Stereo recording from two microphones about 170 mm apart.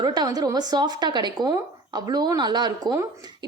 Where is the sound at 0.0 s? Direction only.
25° right (ahead or behind).